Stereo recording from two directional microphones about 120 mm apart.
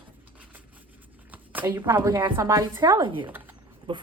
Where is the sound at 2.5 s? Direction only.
30° right (ahead or behind).